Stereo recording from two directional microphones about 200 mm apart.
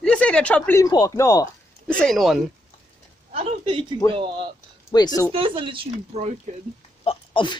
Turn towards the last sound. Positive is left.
turn(degrees=25)  # may be behind; listen again after turning